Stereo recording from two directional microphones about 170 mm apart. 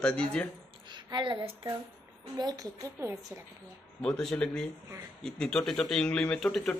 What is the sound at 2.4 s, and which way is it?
A woman's voice, 20° right (ahead or behind).